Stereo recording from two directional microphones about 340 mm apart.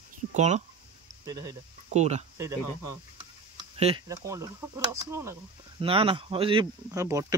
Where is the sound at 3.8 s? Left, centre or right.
Centre.